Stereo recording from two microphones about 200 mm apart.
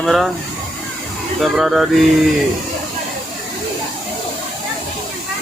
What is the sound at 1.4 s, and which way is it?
Speech, centre (ahead or behind).